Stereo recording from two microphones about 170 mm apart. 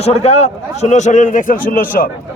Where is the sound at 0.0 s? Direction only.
40° left (ahead or behind).